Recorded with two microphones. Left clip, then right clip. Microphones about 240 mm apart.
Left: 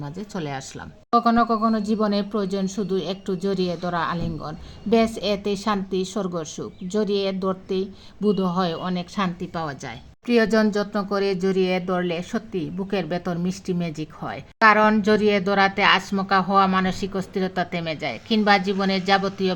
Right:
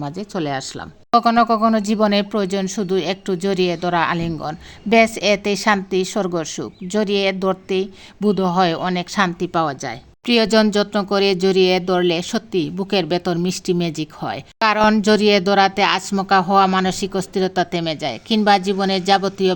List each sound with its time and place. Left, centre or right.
0.0 s speech: right
1.1 s speech: right
10.2 s a woman's voice: right